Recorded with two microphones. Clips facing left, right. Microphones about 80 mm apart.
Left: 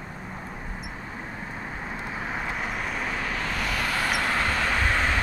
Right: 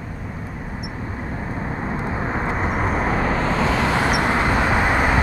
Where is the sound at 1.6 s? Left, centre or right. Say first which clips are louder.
Right 9 dB; right.